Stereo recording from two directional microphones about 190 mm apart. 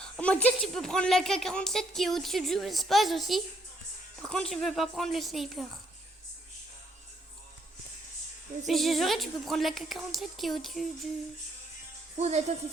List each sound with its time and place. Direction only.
0.0 s a sound: 5° left (ahead or behind)
0.4 s speech: centre (ahead or behind)
8.6 s speech: centre (ahead or behind)
12.1 s speech: 35° right (ahead or behind)